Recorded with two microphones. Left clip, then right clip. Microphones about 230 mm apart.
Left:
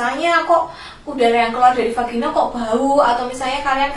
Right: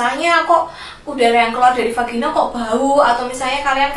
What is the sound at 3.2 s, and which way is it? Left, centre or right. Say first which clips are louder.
Speech: right 2 dB; centre.